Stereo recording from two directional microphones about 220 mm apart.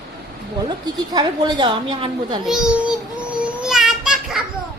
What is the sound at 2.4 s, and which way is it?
Speech, centre (ahead or behind).